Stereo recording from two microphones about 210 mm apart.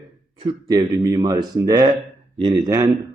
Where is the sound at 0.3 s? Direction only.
20° right (ahead or behind).